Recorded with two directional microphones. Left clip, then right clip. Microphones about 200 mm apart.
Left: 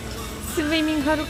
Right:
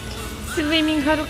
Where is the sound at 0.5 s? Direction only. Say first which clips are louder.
Right 3 dB; centre (ahead or behind).